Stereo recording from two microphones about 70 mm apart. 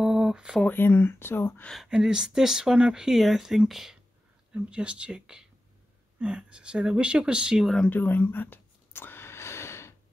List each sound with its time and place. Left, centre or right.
0.0 s a sound: centre
0.7 s speech: left
1.9 s speech: centre
4.5 s speech: centre
7.6 s speech: centre
7.9 s a sound: left